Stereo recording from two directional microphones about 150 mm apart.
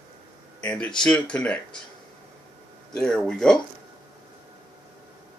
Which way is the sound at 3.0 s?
5° left (ahead or behind).